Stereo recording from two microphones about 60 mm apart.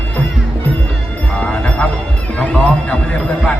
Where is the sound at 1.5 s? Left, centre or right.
Centre.